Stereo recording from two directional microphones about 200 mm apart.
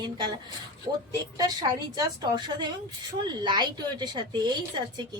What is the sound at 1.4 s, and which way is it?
A woman's voice, 20° right (ahead or behind).